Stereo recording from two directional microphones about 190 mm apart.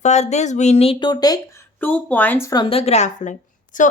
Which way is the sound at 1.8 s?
10° left (ahead or behind).